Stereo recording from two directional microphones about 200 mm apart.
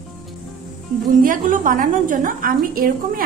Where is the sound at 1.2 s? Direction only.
40° right (ahead or behind).